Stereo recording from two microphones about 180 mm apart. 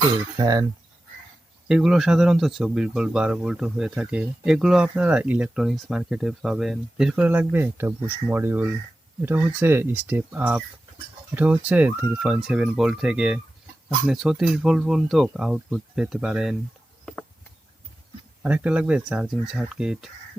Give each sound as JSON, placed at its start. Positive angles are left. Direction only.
{"t": 0.3, "sound": "speech", "side_deg": -20}
{"t": 1.6, "sound": "speech", "side_deg": -5}
{"t": 18.4, "sound": "speech", "side_deg": -10}